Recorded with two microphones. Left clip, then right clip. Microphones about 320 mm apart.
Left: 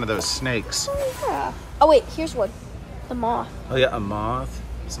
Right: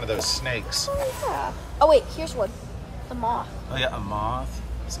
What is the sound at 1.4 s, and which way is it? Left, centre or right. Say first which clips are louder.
A woman's voice: left 2 dB; centre.